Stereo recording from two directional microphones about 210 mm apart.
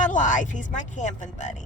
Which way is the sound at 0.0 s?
40° left (ahead or behind).